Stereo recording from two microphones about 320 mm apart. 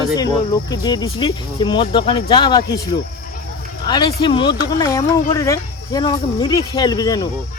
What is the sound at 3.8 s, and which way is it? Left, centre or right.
Speech, centre.